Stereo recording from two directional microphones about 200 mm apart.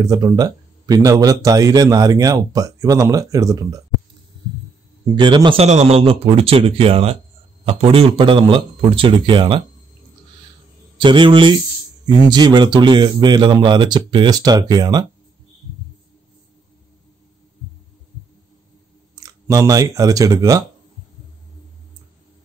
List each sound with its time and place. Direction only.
0.0 s a man's voice: 20° right (ahead or behind)
5.1 s speech: 25° right (ahead or behind)
11.0 s speech: 25° right (ahead or behind)
19.1 s speech: 15° right (ahead or behind)